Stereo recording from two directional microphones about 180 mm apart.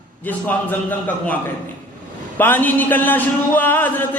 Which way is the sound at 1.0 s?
10° left (ahead or behind).